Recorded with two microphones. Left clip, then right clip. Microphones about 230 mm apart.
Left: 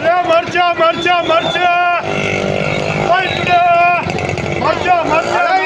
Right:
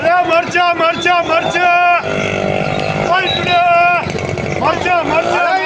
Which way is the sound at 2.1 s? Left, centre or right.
Left.